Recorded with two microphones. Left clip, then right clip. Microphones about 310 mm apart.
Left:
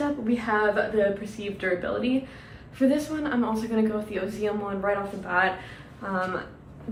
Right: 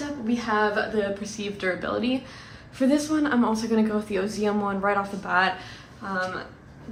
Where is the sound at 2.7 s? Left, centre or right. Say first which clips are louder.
Right 2 dB; right.